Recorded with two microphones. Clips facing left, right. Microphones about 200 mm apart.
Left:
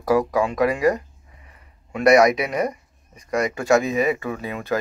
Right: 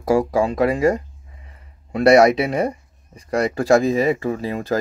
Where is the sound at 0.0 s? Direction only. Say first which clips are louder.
Right 2 dB; 30° right (ahead or behind).